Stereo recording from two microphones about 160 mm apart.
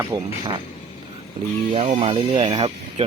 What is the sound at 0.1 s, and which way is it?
Speech, 30° right (ahead or behind).